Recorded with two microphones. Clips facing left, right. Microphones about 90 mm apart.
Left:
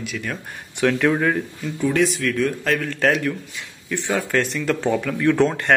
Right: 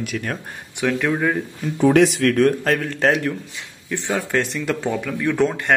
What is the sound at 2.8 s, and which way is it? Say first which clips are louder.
Speech: right 1 dB; 25° right (ahead or behind).